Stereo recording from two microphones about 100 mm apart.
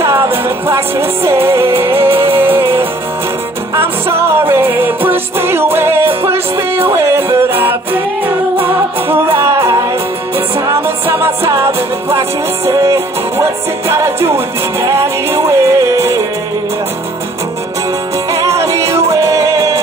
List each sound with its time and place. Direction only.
0.0 s music: 25° right (ahead or behind)
9.1 s music: 25° right (ahead or behind)
18.3 s music: 30° right (ahead or behind)